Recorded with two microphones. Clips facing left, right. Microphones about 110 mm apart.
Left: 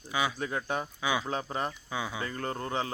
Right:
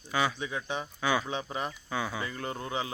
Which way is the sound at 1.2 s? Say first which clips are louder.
Left 1 dB; 40° left (ahead or behind).